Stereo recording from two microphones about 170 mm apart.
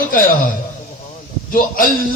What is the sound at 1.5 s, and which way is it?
Speech, 55° left (ahead or behind).